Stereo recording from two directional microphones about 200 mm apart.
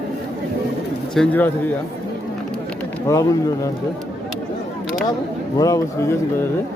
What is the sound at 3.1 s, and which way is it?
Speech, 15° left (ahead or behind).